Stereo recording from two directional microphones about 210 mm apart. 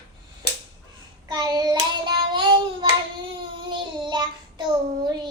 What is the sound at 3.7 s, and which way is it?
Child singing, 20° right (ahead or behind).